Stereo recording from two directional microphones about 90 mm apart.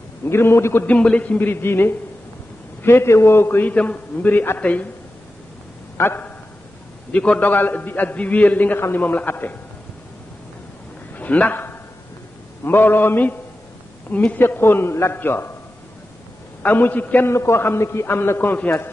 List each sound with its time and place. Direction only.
0.2 s a man's voice: 25° left (ahead or behind)
0.8 s a man's voice: 15° left (ahead or behind)
5.9 s a man's voice: 25° left (ahead or behind)
7.1 s a man's voice: 10° left (ahead or behind)
11.1 s a man's voice: 15° left (ahead or behind)
16.6 s a man's voice: 20° left (ahead or behind)